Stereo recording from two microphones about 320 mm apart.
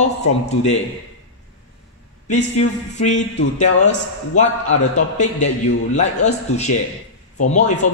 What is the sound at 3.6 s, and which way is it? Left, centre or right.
A man's voice, left.